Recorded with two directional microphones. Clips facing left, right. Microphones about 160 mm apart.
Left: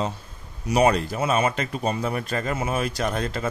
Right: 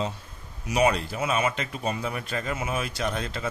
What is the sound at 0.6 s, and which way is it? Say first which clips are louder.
Speech: left 4 dB; 40° left (ahead or behind).